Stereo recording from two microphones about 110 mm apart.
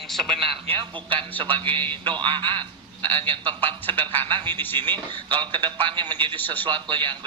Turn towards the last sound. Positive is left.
turn(degrees=-45)  # may be behind; listen again after turning